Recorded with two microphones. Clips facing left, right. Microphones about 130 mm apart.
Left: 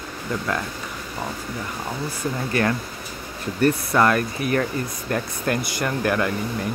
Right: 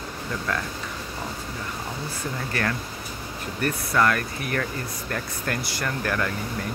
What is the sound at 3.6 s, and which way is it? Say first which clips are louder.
Speech: left 4 dB; 30° left (ahead or behind).